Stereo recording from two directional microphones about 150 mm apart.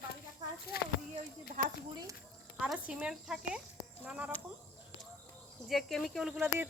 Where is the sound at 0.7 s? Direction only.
90° left.